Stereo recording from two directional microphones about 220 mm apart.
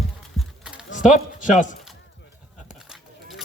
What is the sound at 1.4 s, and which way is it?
Speech, 35° left (ahead or behind).